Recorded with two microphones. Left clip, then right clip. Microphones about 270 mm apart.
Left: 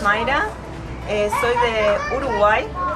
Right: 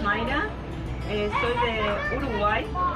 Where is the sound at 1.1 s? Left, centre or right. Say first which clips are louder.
Left 7 dB; centre.